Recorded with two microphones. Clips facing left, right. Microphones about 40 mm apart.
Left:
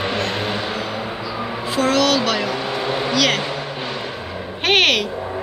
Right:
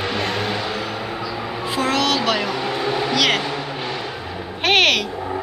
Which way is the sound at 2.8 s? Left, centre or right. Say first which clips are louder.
Right 1 dB; left.